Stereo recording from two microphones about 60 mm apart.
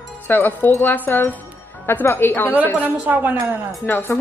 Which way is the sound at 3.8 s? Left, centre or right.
Left.